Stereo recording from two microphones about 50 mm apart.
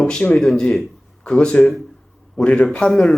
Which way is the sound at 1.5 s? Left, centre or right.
Left.